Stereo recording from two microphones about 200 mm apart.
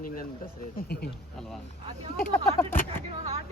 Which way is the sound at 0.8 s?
50° left (ahead or behind).